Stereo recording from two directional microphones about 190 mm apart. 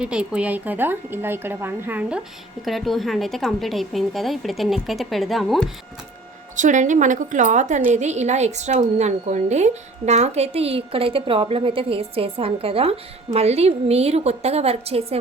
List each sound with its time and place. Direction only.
0.0 s a woman's voice: 5° right (ahead or behind)
6.6 s a woman's voice: 40° right (ahead or behind)